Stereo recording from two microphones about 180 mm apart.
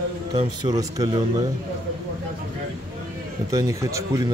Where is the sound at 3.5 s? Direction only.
20° right (ahead or behind).